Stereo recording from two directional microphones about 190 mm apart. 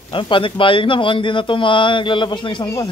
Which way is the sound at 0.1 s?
25° left (ahead or behind).